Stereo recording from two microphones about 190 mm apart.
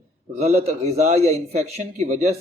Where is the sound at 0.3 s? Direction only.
35° right (ahead or behind).